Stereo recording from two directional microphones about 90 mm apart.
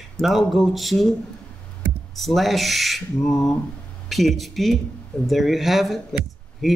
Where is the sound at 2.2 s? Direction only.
Centre (ahead or behind).